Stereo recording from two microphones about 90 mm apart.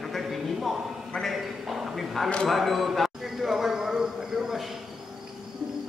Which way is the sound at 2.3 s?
10° left (ahead or behind).